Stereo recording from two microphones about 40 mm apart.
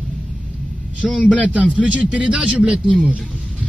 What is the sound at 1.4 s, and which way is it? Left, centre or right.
A man's voice, right.